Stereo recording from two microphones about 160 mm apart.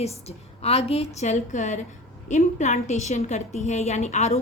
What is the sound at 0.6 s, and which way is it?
A woman's voice, 40° left (ahead or behind).